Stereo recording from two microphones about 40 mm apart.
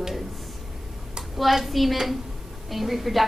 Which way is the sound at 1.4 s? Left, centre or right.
Centre.